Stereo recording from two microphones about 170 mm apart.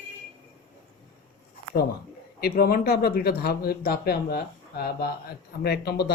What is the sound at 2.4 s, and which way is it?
Speech, 65° left (ahead or behind).